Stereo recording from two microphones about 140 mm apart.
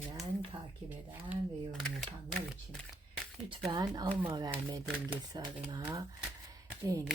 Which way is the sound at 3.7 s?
30° right (ahead or behind).